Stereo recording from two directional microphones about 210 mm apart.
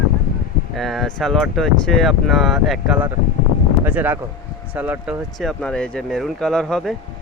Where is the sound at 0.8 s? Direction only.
Centre (ahead or behind).